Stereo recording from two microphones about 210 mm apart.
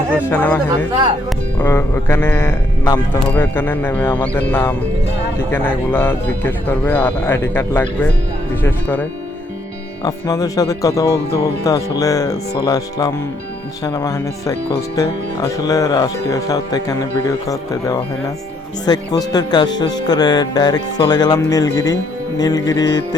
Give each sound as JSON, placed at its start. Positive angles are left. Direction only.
{"t": 0.3, "sound": "speech", "side_deg": 10}